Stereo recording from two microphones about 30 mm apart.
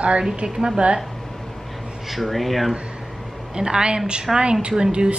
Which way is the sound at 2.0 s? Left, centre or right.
Centre.